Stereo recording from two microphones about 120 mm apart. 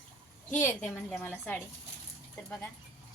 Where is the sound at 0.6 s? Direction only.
20° left (ahead or behind).